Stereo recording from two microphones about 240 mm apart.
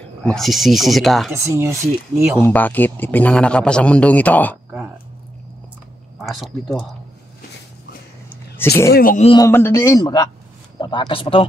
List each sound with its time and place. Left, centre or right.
0.3 s speech: centre
1.3 s speech: centre
2.4 s a man's voice: centre
6.1 s speech: centre
8.6 s a man's voice: centre
8.9 s speech: left
9.4 s a man's voice: centre